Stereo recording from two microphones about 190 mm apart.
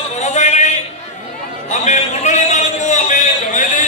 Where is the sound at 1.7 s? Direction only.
40° left (ahead or behind).